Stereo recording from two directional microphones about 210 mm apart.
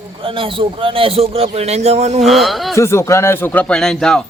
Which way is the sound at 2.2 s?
Centre (ahead or behind).